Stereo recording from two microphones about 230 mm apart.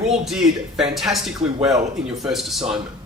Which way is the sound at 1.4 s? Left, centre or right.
Right.